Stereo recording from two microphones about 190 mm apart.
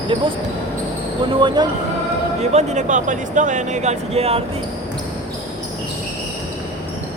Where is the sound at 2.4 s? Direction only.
35° right (ahead or behind).